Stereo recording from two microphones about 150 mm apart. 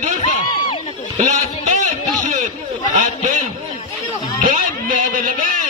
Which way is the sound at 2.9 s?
55° right (ahead or behind).